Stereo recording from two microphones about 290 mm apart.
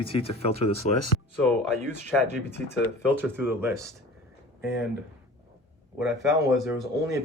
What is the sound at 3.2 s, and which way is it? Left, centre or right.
Speech, centre.